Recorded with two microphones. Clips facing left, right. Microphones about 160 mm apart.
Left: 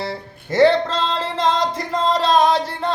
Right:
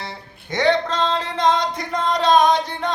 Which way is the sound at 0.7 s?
30° left (ahead or behind).